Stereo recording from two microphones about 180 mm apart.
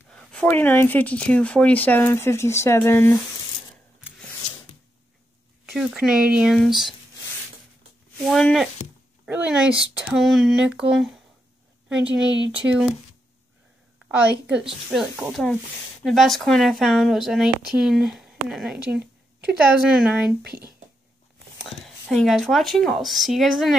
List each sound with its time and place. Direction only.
0.1 s speech: 5° left (ahead or behind)
5.7 s speech: centre (ahead or behind)
8.2 s speech: 5° left (ahead or behind)
12.3 s speech: 90° right
12.5 s speech: 5° right (ahead or behind)
14.9 s speech: 5° right (ahead or behind)
21.5 s speech: centre (ahead or behind)